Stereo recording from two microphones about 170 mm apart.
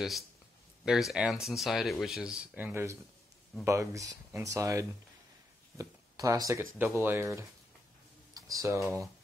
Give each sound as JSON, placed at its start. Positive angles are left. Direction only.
{"t": 0.8, "sound": "speech", "side_deg": 0}